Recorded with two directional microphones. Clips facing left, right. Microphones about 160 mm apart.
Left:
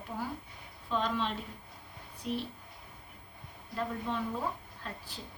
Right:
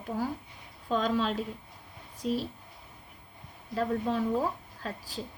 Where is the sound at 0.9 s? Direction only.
40° right (ahead or behind).